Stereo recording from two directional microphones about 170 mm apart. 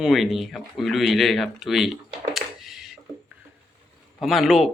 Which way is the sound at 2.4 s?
Centre (ahead or behind).